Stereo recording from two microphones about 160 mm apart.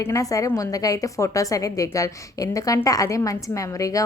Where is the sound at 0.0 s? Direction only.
20° left (ahead or behind).